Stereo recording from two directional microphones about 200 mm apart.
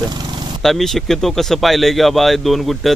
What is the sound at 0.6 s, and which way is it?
Speech, centre (ahead or behind).